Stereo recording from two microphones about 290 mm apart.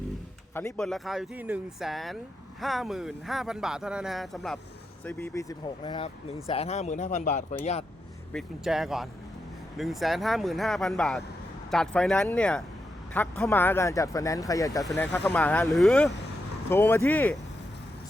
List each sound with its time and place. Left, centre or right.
0.5 s speech: centre; by 7.9 s left
8.3 s speech: centre